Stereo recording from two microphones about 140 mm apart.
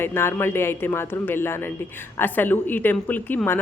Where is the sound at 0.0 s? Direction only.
15° left (ahead or behind).